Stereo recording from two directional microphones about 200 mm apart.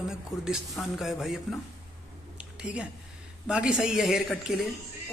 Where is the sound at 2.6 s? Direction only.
5° right (ahead or behind).